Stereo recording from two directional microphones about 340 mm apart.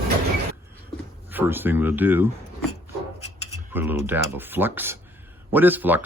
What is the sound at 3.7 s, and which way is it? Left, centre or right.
Speech, centre.